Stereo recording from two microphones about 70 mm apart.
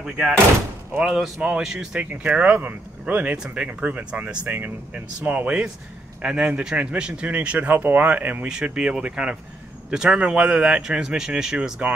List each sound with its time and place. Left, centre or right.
1.0 s speech: centre
2.0 s speech: right